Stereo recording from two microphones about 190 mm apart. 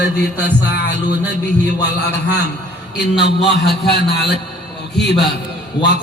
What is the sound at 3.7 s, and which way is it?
Speech, 60° left (ahead or behind).